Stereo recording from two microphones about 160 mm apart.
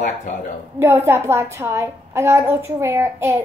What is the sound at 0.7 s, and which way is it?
A woman's voice, 15° right (ahead or behind).